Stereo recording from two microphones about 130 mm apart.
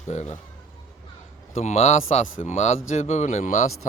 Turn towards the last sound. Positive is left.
turn(degrees=65)  # may be behind; listen again after turning